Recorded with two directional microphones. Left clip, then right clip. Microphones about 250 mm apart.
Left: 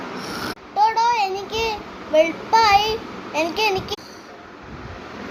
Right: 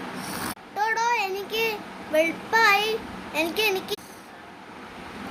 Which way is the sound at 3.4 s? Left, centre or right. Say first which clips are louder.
Left 4 dB; centre.